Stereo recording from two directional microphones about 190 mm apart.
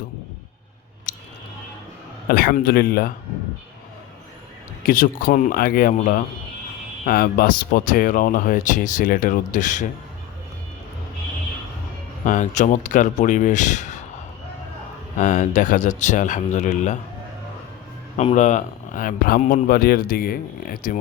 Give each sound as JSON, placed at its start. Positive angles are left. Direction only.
{"t": 1.1, "sound": "a sound", "side_deg": 45}
{"t": 2.3, "sound": "speech", "side_deg": 55}
{"t": 4.9, "sound": "speech", "side_deg": 45}
{"t": 12.2, "sound": "speech", "side_deg": 40}
{"t": 15.2, "sound": "speech", "side_deg": 40}
{"t": 18.2, "sound": "speech", "side_deg": 35}